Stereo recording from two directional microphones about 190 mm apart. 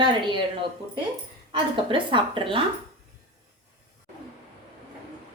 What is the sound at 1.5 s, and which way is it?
A woman's voice, 25° right (ahead or behind).